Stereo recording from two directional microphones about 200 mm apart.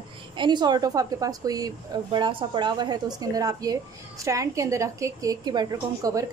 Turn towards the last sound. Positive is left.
turn(degrees=-20)  # may be behind; listen again after turning